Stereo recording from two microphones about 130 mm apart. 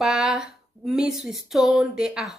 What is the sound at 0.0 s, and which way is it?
Speech, 5° right (ahead or behind).